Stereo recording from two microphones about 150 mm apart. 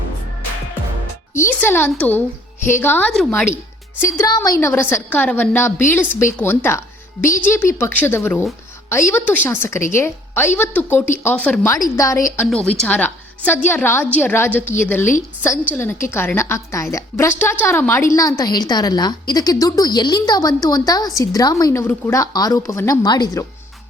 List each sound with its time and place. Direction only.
1.4 s a woman's voice: 15° left (ahead or behind)
4.0 s a woman's voice: 20° left (ahead or behind)
11.7 s a woman's voice: 20° left (ahead or behind)
12.8 s a woman's voice: 10° left (ahead or behind)
14.6 s a woman's voice: 55° left (ahead or behind)
14.8 s a woman's voice: 15° left (ahead or behind)